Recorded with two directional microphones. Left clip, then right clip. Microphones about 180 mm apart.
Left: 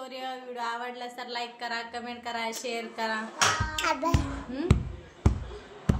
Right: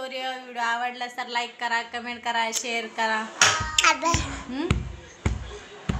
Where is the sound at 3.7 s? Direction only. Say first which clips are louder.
Right 7 dB; 20° left (ahead or behind).